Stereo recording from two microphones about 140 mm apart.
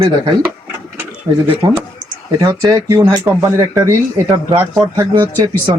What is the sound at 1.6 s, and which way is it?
Speech, 30° right (ahead or behind).